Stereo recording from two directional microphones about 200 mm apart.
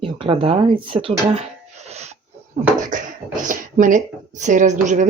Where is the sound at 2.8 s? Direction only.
40° right (ahead or behind).